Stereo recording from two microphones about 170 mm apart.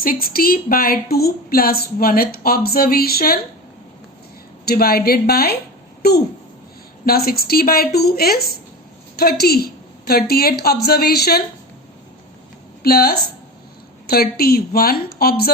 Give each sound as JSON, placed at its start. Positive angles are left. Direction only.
{"t": 0.0, "sound": "a woman's voice", "side_deg": 60}
{"t": 4.6, "sound": "a woman's voice", "side_deg": 60}
{"t": 12.8, "sound": "a woman's voice", "side_deg": 65}